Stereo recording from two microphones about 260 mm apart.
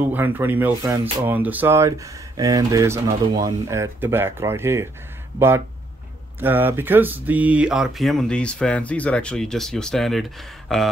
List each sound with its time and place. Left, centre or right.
0.0 s speech: centre
6.4 s speech: centre